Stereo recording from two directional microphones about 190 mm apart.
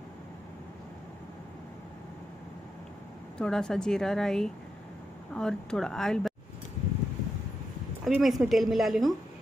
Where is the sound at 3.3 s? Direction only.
5° left (ahead or behind).